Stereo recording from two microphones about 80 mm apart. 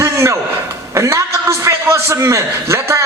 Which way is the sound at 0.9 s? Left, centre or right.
Right.